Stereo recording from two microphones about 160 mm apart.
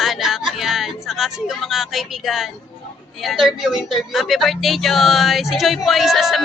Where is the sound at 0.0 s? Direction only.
Centre (ahead or behind).